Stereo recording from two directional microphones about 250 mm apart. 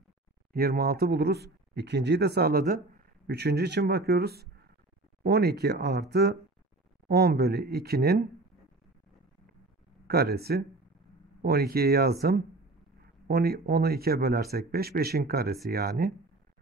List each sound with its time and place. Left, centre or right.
0.5 s speech: right
10.0 s speech: right